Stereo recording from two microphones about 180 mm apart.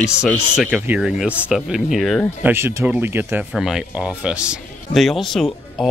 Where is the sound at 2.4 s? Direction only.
15° right (ahead or behind).